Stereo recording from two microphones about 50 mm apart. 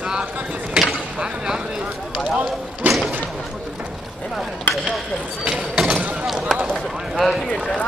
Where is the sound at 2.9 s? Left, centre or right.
Right.